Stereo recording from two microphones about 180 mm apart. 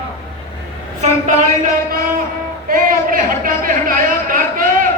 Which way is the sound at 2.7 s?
50° right (ahead or behind).